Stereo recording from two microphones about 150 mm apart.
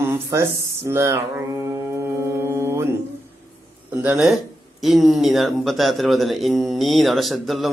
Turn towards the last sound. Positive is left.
turn(degrees=0)  # may be behind; listen again after turning